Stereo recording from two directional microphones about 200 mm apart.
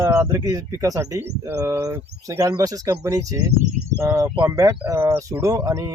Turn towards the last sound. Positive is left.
turn(degrees=-15)  # may be behind; listen again after turning